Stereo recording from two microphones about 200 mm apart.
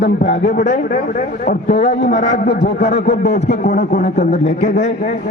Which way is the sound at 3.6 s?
35° left (ahead or behind).